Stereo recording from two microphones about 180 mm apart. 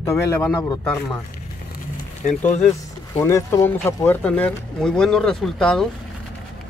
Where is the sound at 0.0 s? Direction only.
15° left (ahead or behind).